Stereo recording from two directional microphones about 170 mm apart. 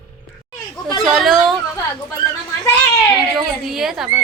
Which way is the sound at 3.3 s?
Centre (ahead or behind).